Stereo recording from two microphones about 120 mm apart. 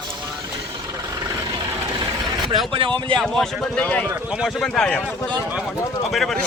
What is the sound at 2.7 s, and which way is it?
Speech, 45° right (ahead or behind).